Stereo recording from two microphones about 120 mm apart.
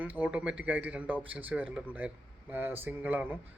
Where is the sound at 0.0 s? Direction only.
15° right (ahead or behind).